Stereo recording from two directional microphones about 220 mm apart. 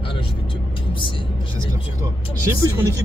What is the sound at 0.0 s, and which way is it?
Vehicle, 25° left (ahead or behind).